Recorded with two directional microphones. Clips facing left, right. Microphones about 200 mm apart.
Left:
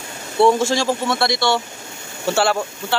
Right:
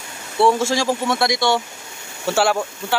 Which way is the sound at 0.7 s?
10° right (ahead or behind).